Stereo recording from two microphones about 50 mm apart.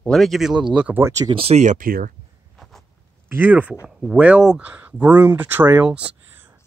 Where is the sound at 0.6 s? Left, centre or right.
Right.